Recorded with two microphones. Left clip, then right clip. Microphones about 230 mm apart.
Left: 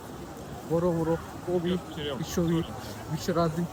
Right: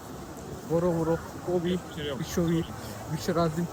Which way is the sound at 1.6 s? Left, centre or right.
Centre.